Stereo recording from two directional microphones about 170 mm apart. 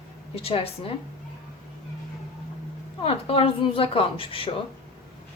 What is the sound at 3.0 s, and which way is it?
A woman's voice, 35° left (ahead or behind).